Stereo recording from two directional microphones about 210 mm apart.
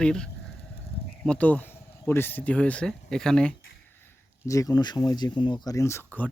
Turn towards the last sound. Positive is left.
turn(degrees=10)  # may be behind; listen again after turning